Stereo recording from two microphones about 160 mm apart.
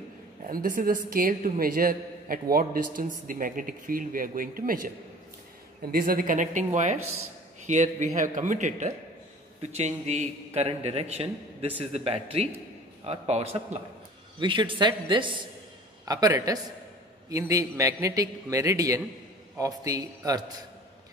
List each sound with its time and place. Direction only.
0.5 s a man's voice: 60° right (ahead or behind); by 20.5 s 25° right (ahead or behind)